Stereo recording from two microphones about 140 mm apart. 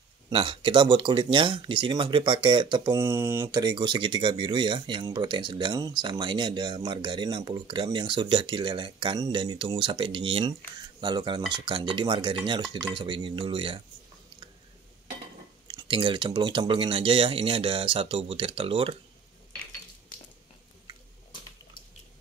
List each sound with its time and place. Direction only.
0.3 s speech: 40° right (ahead or behind)
2.9 s speech: 20° right (ahead or behind)
3.5 s speech: 30° right (ahead or behind)
15.7 s speech: 35° right (ahead or behind)